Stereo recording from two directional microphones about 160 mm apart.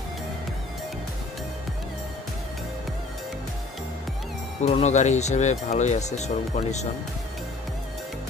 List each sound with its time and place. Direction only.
4.6 s speech: 45° left (ahead or behind)